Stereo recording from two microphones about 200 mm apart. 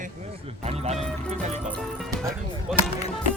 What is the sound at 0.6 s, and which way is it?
Speech, 30° right (ahead or behind).